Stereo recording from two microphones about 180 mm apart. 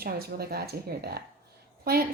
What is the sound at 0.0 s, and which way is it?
Speech, 60° right (ahead or behind).